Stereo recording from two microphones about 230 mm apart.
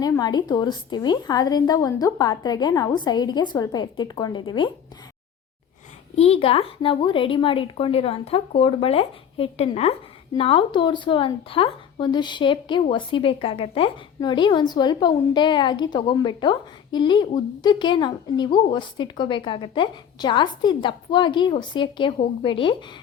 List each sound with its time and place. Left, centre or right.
0.0 s a woman's voice: centre
6.1 s a woman's voice: left